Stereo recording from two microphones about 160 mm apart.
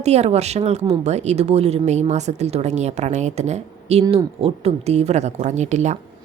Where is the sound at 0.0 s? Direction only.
45° right (ahead or behind).